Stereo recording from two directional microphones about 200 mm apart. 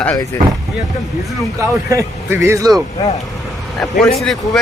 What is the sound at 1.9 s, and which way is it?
Speech, 15° right (ahead or behind).